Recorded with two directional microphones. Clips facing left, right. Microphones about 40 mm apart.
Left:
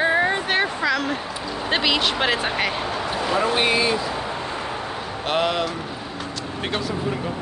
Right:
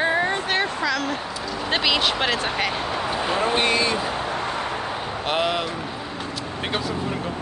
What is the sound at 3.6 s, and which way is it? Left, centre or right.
Speech, centre.